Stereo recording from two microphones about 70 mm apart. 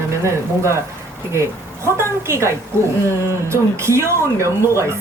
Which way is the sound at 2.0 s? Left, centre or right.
Right.